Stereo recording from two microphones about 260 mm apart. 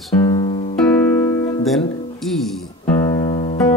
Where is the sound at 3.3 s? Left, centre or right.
Left.